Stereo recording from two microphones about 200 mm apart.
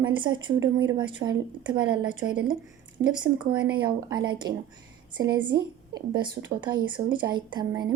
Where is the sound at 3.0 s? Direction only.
65° right (ahead or behind).